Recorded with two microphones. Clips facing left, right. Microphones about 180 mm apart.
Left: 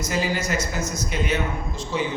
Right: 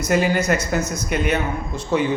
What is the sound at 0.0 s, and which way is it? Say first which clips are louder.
A man's voice: right 6 dB; 60° right (ahead or behind).